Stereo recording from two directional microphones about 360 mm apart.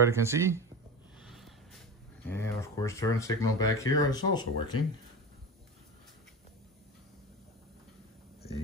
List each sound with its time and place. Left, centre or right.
0.0 s speech: centre
1.2 s a sound: centre
2.2 s speech: centre